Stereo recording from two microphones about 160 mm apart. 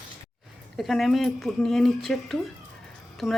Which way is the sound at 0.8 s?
Centre (ahead or behind).